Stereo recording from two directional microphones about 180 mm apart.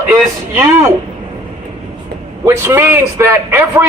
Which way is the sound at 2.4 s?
15° right (ahead or behind).